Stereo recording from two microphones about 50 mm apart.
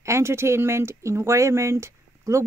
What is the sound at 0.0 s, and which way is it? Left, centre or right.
Speech, right.